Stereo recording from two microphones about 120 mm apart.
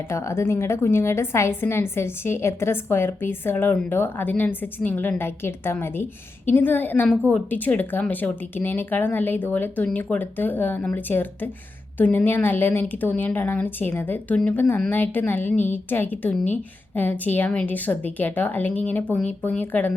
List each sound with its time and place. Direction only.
0.1 s a woman's voice: 25° left (ahead or behind)